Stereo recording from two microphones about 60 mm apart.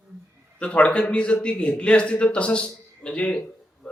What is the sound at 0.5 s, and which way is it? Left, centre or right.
A man's voice, centre.